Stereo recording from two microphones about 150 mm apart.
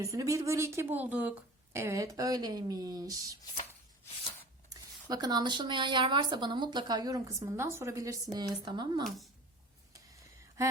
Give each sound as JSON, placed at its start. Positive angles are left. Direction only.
{"t": 0.0, "sound": "speech", "side_deg": -20}
{"t": 4.7, "sound": "speech", "side_deg": -25}
{"t": 9.0, "sound": "speech", "side_deg": 0}